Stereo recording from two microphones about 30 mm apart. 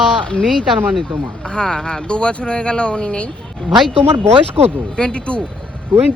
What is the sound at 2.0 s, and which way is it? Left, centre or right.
Speech, left.